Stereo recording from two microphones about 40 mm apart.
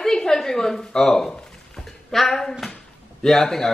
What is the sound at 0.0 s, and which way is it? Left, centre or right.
A woman's voice, centre.